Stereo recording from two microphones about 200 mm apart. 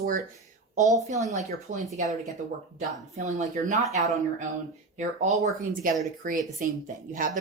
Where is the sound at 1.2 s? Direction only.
35° right (ahead or behind).